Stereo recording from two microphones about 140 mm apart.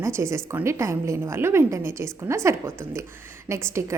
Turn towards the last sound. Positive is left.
turn(degrees=-20)  # may be behind; listen again after turning